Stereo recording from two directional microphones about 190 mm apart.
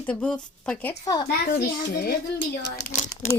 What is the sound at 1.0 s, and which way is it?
Speech, 20° left (ahead or behind).